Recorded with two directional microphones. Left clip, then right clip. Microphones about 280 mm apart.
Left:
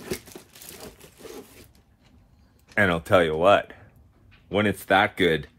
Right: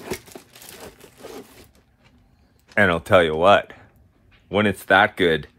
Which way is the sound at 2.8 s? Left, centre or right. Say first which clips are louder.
Right 4 dB; right.